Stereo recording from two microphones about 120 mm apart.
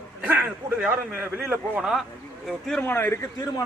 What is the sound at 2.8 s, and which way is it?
Speech, 20° left (ahead or behind).